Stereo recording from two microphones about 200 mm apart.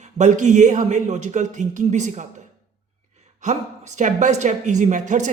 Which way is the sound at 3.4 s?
35° right (ahead or behind).